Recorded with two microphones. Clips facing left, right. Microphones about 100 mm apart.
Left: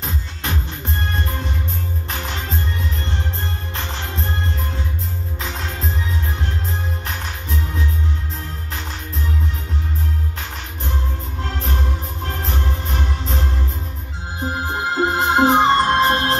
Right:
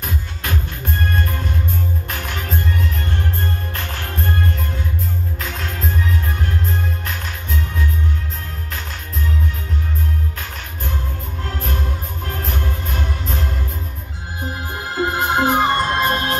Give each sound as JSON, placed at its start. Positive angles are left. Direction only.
{"t": 0.0, "sound": "music", "side_deg": 25}
{"t": 3.7, "sound": "music", "side_deg": 25}
{"t": 11.4, "sound": "music", "side_deg": 30}
{"t": 14.7, "sound": "music", "side_deg": 25}